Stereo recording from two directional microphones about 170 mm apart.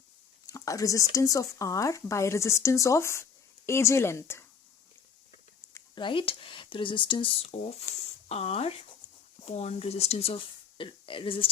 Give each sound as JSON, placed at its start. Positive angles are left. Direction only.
{"t": 0.5, "sound": "speech", "side_deg": 20}
{"t": 5.9, "sound": "speech", "side_deg": 30}